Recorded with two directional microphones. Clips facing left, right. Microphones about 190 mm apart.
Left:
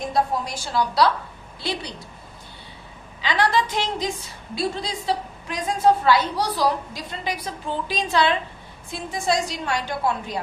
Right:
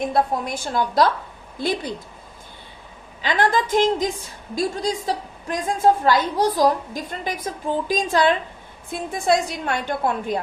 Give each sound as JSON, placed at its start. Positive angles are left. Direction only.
{"t": 0.0, "sound": "a woman's voice", "side_deg": -55}
{"t": 3.2, "sound": "a woman's voice", "side_deg": -50}